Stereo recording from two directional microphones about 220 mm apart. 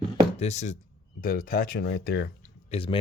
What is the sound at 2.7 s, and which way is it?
Speech, 25° left (ahead or behind).